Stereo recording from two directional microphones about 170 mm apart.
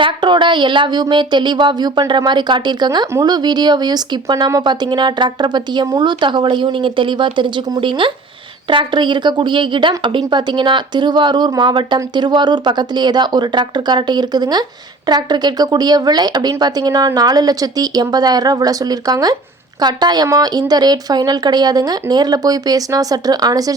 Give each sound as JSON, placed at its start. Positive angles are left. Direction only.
{"t": 0.0, "sound": "a woman's voice", "side_deg": -30}